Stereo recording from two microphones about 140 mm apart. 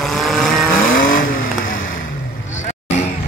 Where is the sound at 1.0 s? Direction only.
80° left.